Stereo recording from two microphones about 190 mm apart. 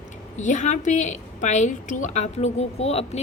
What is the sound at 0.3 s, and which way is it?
A woman's voice, 40° left (ahead or behind).